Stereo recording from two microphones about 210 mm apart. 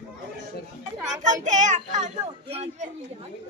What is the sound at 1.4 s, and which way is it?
Speech, 35° right (ahead or behind).